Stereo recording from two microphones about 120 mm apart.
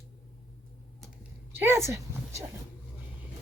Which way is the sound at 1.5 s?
20° right (ahead or behind).